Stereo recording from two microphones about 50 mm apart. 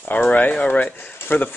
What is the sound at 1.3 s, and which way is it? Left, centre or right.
Speech, left.